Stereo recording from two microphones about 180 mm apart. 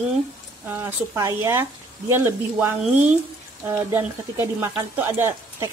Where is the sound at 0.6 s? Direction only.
10° right (ahead or behind).